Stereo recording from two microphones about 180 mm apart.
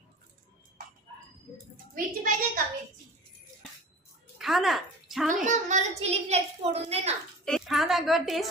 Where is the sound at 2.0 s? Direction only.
50° right (ahead or behind).